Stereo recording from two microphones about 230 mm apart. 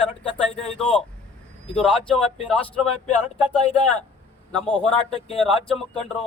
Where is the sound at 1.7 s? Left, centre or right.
Centre.